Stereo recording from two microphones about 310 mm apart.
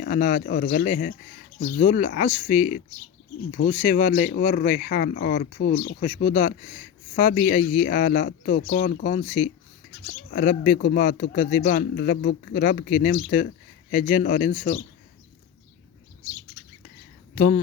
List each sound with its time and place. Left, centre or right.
0.0 s a man's voice: left
17.3 s speech: left